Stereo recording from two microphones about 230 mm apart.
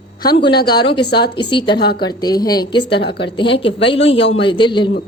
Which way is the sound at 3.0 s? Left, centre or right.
Left.